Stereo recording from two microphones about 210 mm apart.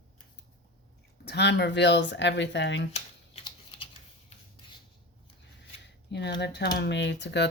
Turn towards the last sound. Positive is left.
turn(degrees=55)  # may be behind; listen again after turning